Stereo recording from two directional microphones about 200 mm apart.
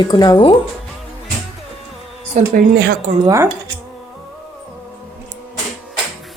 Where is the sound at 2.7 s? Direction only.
55° right (ahead or behind).